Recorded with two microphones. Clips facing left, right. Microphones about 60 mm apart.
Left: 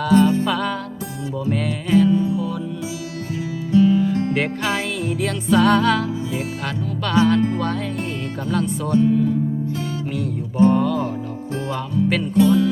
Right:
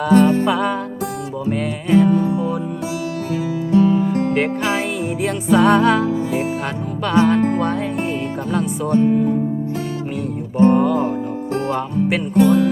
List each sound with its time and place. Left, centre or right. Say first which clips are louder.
0.1 s music: right 2 dB; right
0.4 s music: right 4 dB; centre
2.0 s music: right 2 dB; right
3.7 s music: even; right
4.4 s music: right 3 dB; centre
5.2 s music: right 2 dB; right
8.4 s music: right 1 dB; right
10.6 s music: right 3 dB; right
12.3 s music: right 3 dB; right